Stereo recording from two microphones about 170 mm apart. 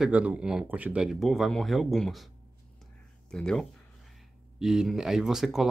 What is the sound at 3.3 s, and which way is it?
Speech, 5° left (ahead or behind).